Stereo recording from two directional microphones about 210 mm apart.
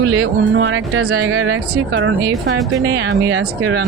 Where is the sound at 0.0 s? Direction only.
55° right (ahead or behind).